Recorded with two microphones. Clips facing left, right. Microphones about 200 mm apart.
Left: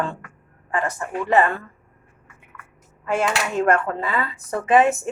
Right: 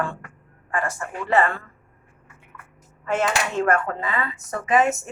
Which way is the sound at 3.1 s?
10° left (ahead or behind).